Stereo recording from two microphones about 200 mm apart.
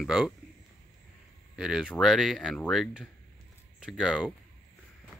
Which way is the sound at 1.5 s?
5° right (ahead or behind).